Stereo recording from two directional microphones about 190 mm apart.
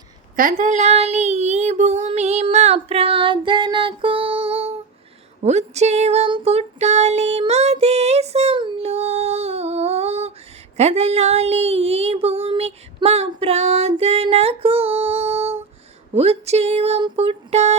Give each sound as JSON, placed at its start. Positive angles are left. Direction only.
{"t": 0.3, "sound": "child singing", "side_deg": -45}
{"t": 5.4, "sound": "a sound", "side_deg": -35}
{"t": 10.8, "sound": "child singing", "side_deg": -35}